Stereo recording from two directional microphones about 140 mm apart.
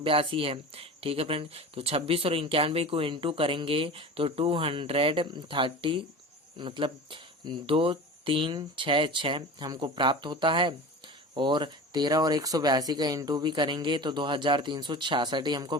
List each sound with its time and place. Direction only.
0.0 s speech: 40° right (ahead or behind)